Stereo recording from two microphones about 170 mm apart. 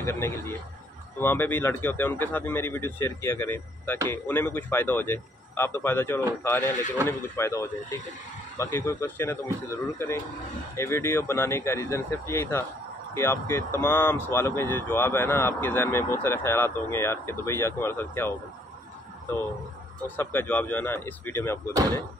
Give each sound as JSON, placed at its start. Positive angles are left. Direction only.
{"t": 0.0, "sound": "speech", "side_deg": 15}
{"t": 20.2, "sound": "speech", "side_deg": 10}